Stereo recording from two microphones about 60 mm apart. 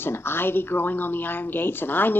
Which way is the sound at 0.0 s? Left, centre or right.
Left.